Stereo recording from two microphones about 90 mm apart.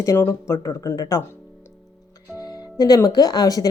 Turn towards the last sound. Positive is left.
turn(degrees=45)  # may be behind; listen again after turning